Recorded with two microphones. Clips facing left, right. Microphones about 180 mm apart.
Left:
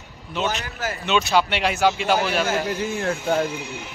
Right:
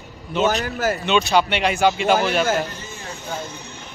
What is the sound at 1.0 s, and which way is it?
A man's voice, centre (ahead or behind).